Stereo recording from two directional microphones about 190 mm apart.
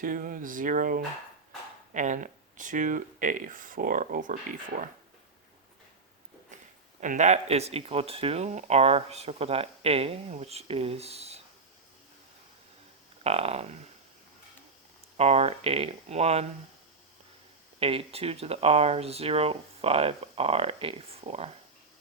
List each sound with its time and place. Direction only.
0.0 s speech: 45° right (ahead or behind)
7.0 s speech: 40° right (ahead or behind)
13.2 s speech: 30° right (ahead or behind)
15.2 s speech: 35° right (ahead or behind)
17.7 s speech: 30° right (ahead or behind)